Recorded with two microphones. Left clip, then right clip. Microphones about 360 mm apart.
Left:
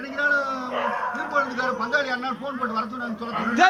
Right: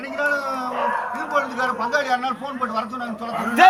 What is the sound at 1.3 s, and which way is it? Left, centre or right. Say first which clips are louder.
Speech: right 2 dB; centre.